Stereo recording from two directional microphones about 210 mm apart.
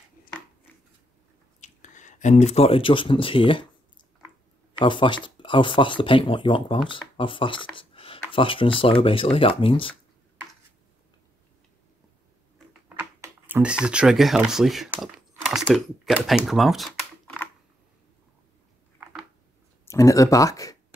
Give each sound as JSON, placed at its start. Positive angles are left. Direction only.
{"t": 1.6, "sound": "speech", "side_deg": 35}
{"t": 4.7, "sound": "speech", "side_deg": 20}
{"t": 12.9, "sound": "speech", "side_deg": -10}
{"t": 19.8, "sound": "speech", "side_deg": 15}